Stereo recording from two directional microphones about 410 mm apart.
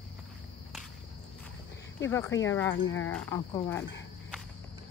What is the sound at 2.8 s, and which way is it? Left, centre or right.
Speech, left.